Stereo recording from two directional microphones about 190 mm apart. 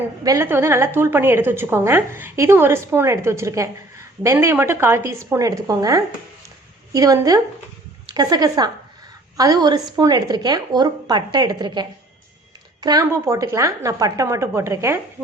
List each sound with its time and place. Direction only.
0.3 s a woman's voice: 15° right (ahead or behind)